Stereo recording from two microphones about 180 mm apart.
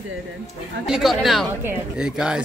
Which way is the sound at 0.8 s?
Centre (ahead or behind).